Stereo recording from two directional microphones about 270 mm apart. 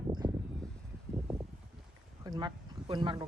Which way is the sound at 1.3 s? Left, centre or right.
Centre.